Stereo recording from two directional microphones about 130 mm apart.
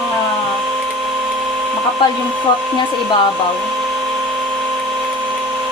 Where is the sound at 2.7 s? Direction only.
40° left (ahead or behind).